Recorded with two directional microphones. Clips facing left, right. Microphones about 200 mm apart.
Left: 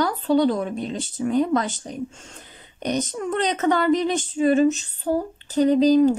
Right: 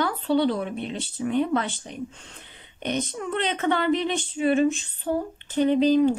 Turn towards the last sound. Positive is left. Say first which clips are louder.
# left 3 dB
turn(degrees=40)  # may be behind; listen again after turning